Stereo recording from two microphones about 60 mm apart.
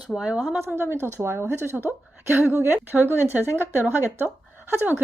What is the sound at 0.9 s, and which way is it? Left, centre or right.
Speech, right.